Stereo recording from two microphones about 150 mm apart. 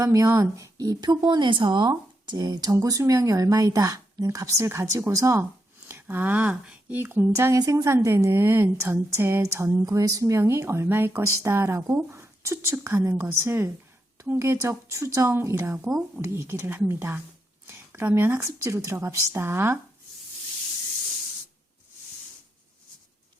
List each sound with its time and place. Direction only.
0.0 s speech: 20° right (ahead or behind)